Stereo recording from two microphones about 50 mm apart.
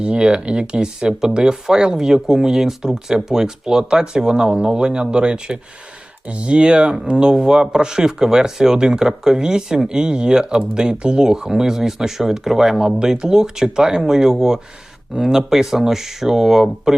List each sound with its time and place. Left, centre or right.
0.0 s speech: centre